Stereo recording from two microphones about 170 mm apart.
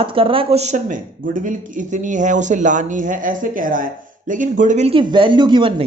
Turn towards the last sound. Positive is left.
turn(degrees=-25)  # may be behind; listen again after turning